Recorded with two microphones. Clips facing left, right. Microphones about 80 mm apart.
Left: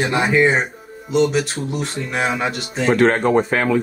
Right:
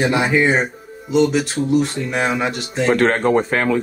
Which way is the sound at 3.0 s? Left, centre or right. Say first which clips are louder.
Left 3 dB; right.